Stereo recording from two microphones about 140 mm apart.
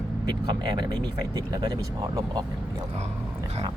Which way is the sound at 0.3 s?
30° right (ahead or behind).